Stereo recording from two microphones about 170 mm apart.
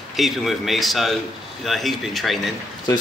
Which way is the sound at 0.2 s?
Centre (ahead or behind).